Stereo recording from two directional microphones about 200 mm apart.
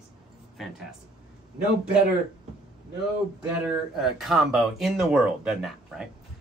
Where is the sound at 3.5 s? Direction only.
Centre (ahead or behind).